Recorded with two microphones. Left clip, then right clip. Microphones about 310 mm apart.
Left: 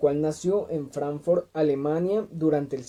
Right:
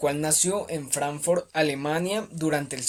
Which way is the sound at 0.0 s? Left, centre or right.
Right.